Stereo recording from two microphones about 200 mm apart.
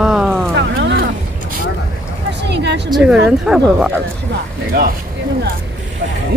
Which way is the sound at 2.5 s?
60° right (ahead or behind).